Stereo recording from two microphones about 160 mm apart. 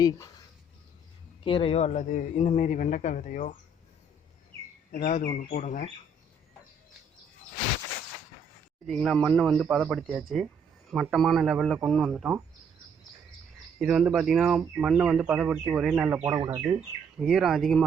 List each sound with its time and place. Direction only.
0.0 s speech: 25° left (ahead or behind)
1.5 s speech: 35° left (ahead or behind); by 3.5 s 55° left (ahead or behind)
5.0 s speech: 50° left (ahead or behind)
8.9 s a man's voice: centre (ahead or behind)
13.7 s speech: 5° right (ahead or behind)
16.3 s speech: 25° right (ahead or behind)
17.2 s a man's voice: 5° right (ahead or behind)